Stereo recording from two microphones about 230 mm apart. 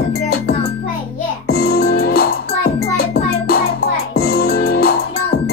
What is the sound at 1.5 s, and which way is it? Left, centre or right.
Music, left.